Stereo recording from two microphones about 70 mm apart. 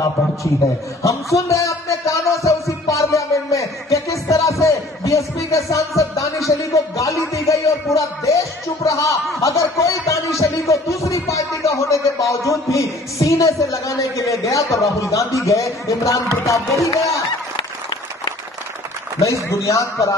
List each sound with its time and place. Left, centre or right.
1.0 s music: left
9.4 s speech: left
19.2 s speech: left